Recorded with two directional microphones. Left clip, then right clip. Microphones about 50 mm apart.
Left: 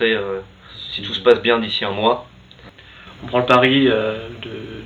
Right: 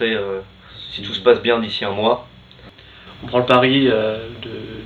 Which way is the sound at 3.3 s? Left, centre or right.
Right.